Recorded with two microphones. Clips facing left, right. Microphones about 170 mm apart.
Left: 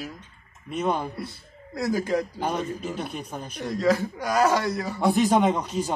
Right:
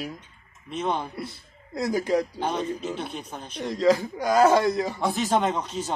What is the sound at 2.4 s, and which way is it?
Speech, 10° left (ahead or behind).